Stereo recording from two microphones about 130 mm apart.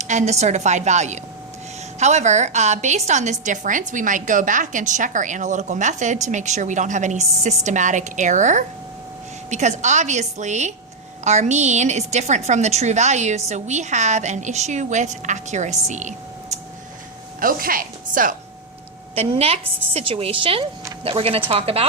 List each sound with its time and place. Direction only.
0.0 s a woman's voice: 65° right (ahead or behind)
17.4 s speech: 90° right
19.1 s a woman's voice: 50° right (ahead or behind)